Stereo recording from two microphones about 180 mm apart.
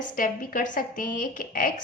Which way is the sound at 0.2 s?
50° left (ahead or behind).